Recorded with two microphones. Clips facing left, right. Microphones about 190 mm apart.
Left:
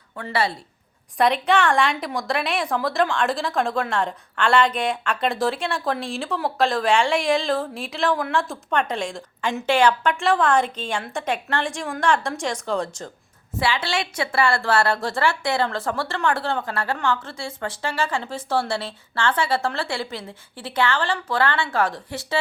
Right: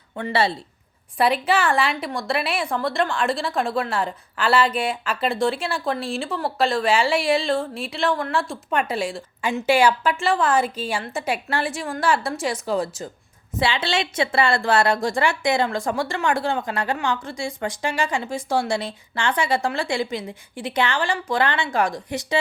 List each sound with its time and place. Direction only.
0.2 s speech: 25° right (ahead or behind)
1.2 s a woman's voice: 5° right (ahead or behind)
13.6 s a woman's voice: 25° right (ahead or behind)